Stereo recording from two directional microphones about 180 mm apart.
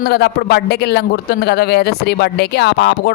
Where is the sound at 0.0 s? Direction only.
60° left (ahead or behind).